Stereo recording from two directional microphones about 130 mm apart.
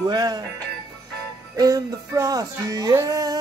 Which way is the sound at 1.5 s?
30° right (ahead or behind).